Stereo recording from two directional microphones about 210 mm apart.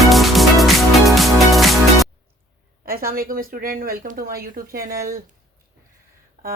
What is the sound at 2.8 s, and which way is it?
A woman's voice, 45° right (ahead or behind).